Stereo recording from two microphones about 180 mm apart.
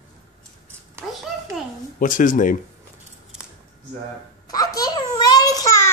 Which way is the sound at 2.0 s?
45° left (ahead or behind).